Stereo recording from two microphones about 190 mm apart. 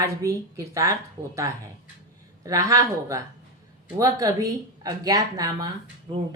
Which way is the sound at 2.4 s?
20° right (ahead or behind).